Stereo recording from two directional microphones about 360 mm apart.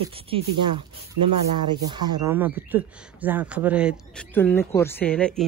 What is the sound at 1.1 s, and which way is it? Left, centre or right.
Speech, right.